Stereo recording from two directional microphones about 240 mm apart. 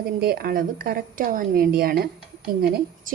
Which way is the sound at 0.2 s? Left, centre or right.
Right.